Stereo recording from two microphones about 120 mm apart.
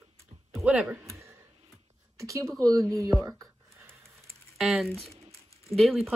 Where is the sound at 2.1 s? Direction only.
25° right (ahead or behind).